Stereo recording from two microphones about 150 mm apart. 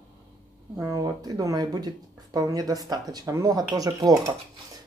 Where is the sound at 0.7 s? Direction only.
20° right (ahead or behind).